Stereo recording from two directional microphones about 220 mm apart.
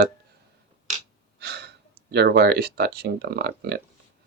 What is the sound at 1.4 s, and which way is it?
Speech, 50° right (ahead or behind).